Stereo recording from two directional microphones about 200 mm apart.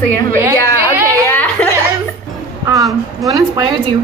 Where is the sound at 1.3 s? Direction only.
10° left (ahead or behind).